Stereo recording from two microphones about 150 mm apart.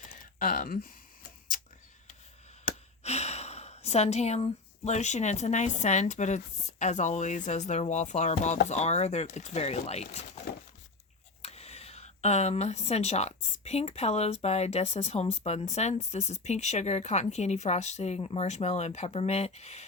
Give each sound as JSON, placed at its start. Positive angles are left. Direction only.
{"t": 0.3, "sound": "speech", "side_deg": 65}
{"t": 2.6, "sound": "speech", "side_deg": 45}
{"t": 11.4, "sound": "speech", "side_deg": 45}